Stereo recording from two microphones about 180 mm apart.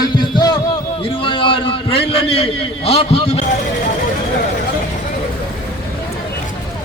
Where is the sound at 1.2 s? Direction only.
30° left (ahead or behind).